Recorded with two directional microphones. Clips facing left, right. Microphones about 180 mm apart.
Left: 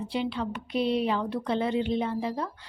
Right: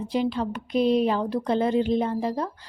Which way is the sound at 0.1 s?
40° right (ahead or behind).